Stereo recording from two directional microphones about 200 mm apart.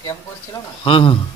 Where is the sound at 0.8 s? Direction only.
25° left (ahead or behind).